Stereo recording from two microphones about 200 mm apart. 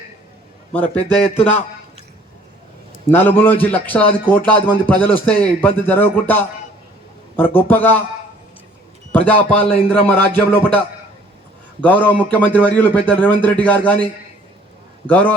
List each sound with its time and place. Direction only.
0.7 s a man's voice: 5° left (ahead or behind)
1.1 s a man's voice: 30° left (ahead or behind)
3.1 s a man's voice: 10° left (ahead or behind)
9.1 s a man's voice: 5° left (ahead or behind)
11.8 s a man's voice: 10° left (ahead or behind)
15.0 s a man's voice: 10° left (ahead or behind)